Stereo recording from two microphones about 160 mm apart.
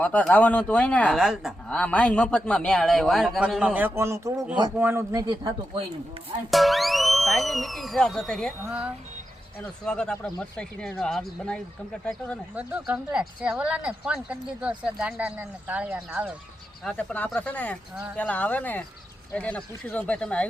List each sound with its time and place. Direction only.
0.0 s speech: 10° left (ahead or behind)
1.1 s speech: 5° right (ahead or behind); by 5.5 s 20° right (ahead or behind)
6.5 s speech: centre (ahead or behind)
8.6 s speech: 10° right (ahead or behind)
9.8 s speech: 5° left (ahead or behind)
12.5 s speech: 10° right (ahead or behind)
16.8 s speech: 5° left (ahead or behind)